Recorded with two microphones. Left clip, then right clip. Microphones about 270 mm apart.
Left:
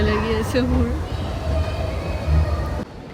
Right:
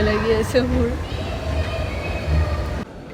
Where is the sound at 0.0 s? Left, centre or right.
Centre.